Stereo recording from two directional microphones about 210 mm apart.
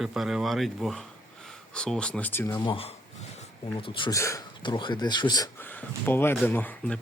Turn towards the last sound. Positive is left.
turn(degrees=5)  # may be behind; listen again after turning